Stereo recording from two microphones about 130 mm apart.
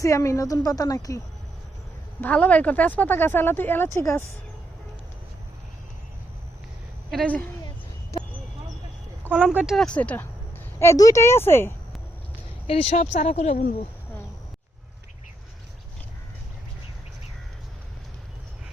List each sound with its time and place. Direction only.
0.0 s a woman's voice: 25° left (ahead or behind)
2.2 s speech: 10° left (ahead or behind)
7.1 s speech: 5° left (ahead or behind)
9.3 s speech: 10° right (ahead or behind)
9.7 s speech: 10° left (ahead or behind)
10.8 s a woman's voice: 25° left (ahead or behind)
12.6 s speech: 50° left (ahead or behind); by 13.7 s 80° left